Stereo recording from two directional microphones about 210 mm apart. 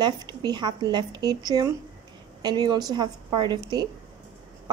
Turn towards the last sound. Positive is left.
turn(degrees=-20)  # may be behind; listen again after turning